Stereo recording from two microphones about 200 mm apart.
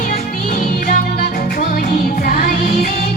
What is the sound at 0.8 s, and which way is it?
Music, 40° left (ahead or behind).